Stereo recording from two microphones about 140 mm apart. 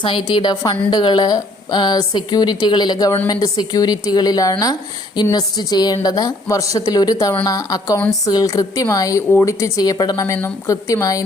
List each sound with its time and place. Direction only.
0.0 s a woman's voice: 35° left (ahead or behind)